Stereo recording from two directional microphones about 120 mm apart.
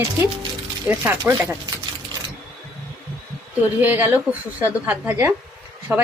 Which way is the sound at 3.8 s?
20° right (ahead or behind).